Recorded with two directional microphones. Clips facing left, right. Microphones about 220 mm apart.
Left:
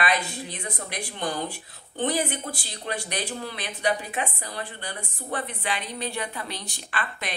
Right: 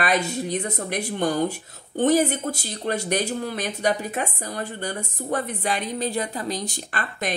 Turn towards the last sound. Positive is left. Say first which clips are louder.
# right 4 dB
turn(degrees=-40)  # may be behind; listen again after turning